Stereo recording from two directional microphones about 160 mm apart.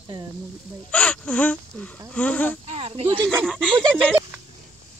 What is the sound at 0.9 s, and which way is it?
Speech, 10° left (ahead or behind).